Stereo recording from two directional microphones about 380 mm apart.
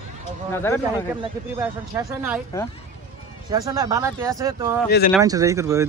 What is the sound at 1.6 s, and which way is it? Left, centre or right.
Speech, centre.